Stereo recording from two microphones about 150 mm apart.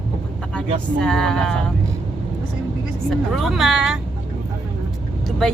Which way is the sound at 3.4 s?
Centre (ahead or behind).